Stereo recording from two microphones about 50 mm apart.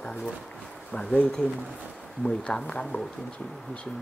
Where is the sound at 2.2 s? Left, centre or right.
Centre.